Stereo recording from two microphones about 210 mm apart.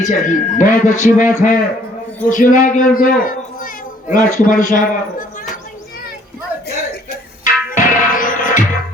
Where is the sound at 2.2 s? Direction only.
40° left (ahead or behind).